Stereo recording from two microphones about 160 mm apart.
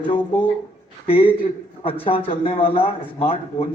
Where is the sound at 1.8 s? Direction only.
35° left (ahead or behind).